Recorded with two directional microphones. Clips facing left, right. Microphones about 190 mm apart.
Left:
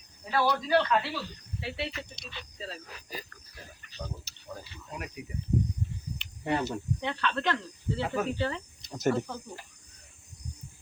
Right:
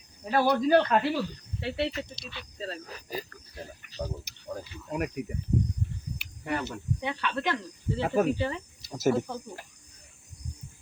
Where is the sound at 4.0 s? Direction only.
30° right (ahead or behind).